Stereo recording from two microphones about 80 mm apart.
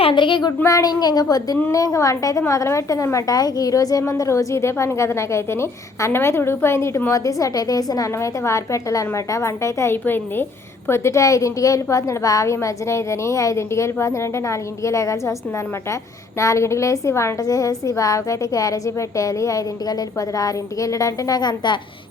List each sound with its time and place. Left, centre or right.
0.1 s child singing: left
0.6 s a woman's voice: left
7.1 s a woman's voice: left
9.9 s a woman's voice: left
16.4 s a woman's voice: left
17.4 s a woman's voice: left